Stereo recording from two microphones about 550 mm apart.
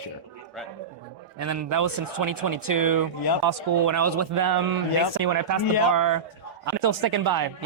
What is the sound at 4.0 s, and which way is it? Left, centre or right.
Speech, right.